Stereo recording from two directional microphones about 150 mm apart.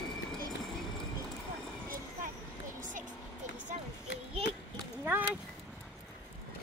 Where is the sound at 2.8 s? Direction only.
60° right (ahead or behind).